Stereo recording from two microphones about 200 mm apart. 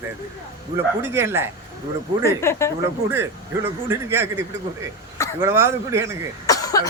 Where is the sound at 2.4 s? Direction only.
15° left (ahead or behind).